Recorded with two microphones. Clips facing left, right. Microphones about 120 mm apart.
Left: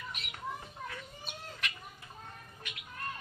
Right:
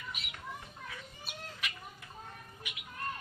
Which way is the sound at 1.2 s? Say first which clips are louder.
Even; 5° right (ahead or behind).